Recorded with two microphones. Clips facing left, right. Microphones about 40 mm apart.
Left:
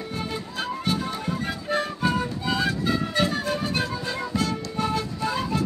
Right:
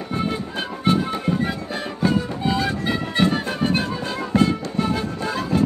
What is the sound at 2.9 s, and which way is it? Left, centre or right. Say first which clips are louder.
Music: right 3 dB; right.